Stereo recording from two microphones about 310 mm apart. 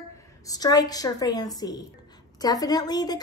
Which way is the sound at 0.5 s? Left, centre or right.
Centre.